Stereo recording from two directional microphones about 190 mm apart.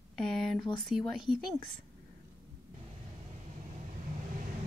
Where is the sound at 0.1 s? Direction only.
Centre (ahead or behind).